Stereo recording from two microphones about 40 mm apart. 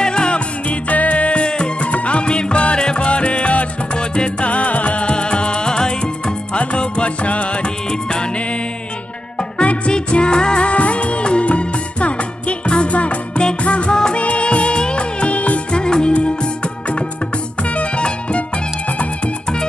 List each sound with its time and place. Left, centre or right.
0.0 s music: left
0.7 s music: left
1.9 s music: left
15.7 s music: left